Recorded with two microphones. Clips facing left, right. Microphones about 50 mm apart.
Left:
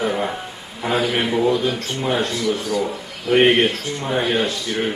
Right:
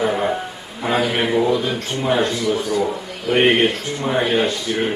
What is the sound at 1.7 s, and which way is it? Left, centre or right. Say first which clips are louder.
Speech: right 2 dB; centre.